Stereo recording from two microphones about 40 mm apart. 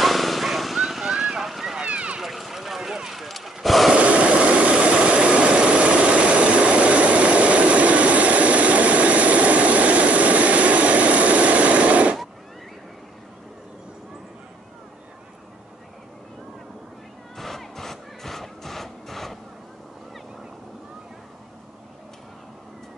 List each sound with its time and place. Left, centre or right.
0.0 s vehicle: centre
1.8 s run: right
2.1 s run: centre
3.6 s a sound: centre
3.9 s vehicle: right
17.4 s a sound: centre